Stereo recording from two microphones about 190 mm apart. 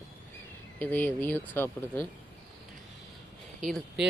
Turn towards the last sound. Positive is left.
turn(degrees=0)  # may be behind; listen again after turning